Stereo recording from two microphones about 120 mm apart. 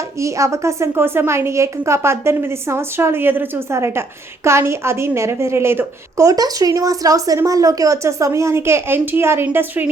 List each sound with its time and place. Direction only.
0.2 s a woman's voice: 25° right (ahead or behind)